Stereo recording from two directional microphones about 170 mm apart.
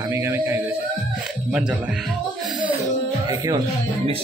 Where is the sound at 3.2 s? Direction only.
25° right (ahead or behind).